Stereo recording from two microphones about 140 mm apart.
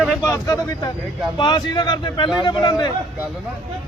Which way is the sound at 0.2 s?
20° left (ahead or behind).